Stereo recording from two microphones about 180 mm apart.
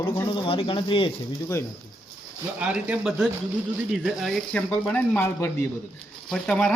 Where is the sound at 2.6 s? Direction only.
5° right (ahead or behind).